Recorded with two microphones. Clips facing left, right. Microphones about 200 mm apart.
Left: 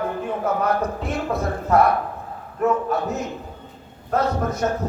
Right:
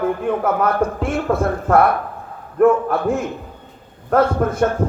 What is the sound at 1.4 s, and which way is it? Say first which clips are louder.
A man's voice: right 2 dB; 55° right (ahead or behind).